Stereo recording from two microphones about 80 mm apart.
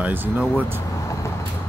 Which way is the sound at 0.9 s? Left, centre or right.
Left.